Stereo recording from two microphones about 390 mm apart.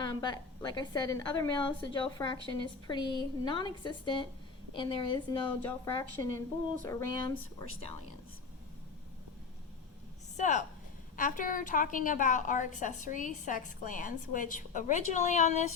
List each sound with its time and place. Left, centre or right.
0.0 s a woman's voice: centre
10.3 s a woman's voice: centre